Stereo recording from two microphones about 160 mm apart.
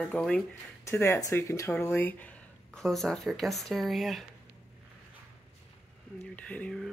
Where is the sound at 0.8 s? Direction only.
15° left (ahead or behind).